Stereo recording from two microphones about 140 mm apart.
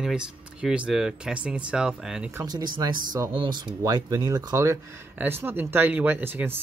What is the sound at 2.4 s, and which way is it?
Speech, 30° right (ahead or behind).